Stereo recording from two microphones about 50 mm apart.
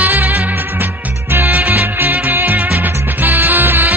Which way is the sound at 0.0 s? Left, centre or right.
Right.